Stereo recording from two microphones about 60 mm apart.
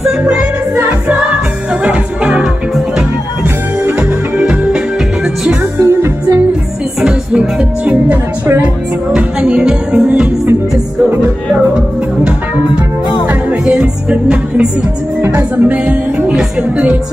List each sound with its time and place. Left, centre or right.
1.9 s music: centre
4.4 s music: right
5.8 s music: right
7.0 s music: centre
7.8 s music: right
13.3 s music: right
15.2 s music: right
15.6 s music: right